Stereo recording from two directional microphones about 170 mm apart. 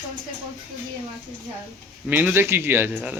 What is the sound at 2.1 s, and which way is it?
A man's voice, 10° right (ahead or behind).